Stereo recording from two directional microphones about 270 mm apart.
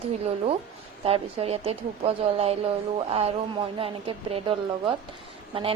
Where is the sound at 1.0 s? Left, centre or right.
Right.